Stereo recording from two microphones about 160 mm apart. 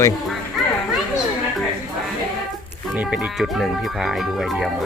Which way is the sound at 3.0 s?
5° right (ahead or behind).